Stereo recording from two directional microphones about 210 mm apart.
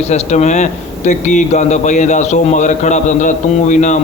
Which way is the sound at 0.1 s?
35° left (ahead or behind).